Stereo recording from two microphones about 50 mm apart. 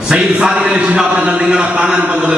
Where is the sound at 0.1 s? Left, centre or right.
Centre.